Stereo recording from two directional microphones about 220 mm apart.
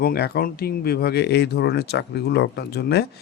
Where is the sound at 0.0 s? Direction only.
45° left (ahead or behind).